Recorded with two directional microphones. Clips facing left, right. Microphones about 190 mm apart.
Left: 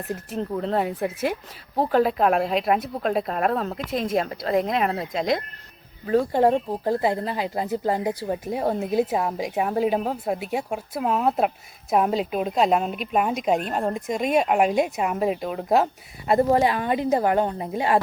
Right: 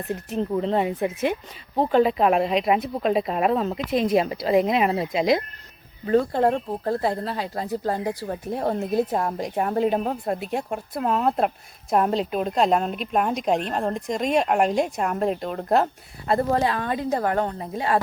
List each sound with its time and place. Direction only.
0.1 s a woman's voice: centre (ahead or behind)
6.1 s a woman's voice: 10° left (ahead or behind)
16.3 s a woman's voice: 15° left (ahead or behind)